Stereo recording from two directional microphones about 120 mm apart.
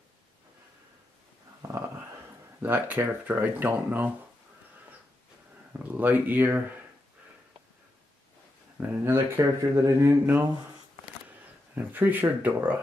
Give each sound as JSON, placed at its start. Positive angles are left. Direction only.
{"t": 1.6, "sound": "a sound", "side_deg": -20}
{"t": 2.6, "sound": "speech", "side_deg": -15}
{"t": 5.7, "sound": "speech", "side_deg": -15}
{"t": 8.7, "sound": "speech", "side_deg": -15}
{"t": 11.7, "sound": "speech", "side_deg": -15}